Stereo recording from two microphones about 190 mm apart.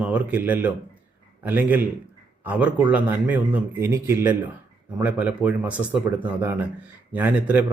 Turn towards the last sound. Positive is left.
turn(degrees=-10)  # may be behind; listen again after turning